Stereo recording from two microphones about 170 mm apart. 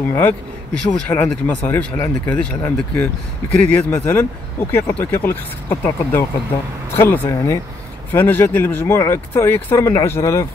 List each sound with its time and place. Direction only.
0.1 s speech: 10° left (ahead or behind)